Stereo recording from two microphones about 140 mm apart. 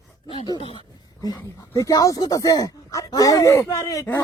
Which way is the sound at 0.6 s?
40° left (ahead or behind).